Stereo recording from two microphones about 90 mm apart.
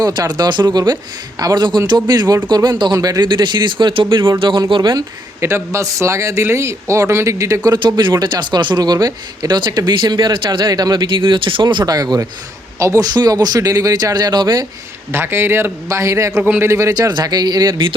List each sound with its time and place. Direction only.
0.0 s speech: 50° right (ahead or behind); by 4.6 s 65° right (ahead or behind)
4.7 s speech: 55° right (ahead or behind)
5.4 s speech: 30° right (ahead or behind)
7.6 s speech: 50° right (ahead or behind)
11.9 s speech: 45° right (ahead or behind)
15.1 s a man's voice: 25° right (ahead or behind)
16.4 s speech: 15° right (ahead or behind)
16.6 s speech: 35° right (ahead or behind); by 17.8 s 50° right (ahead or behind)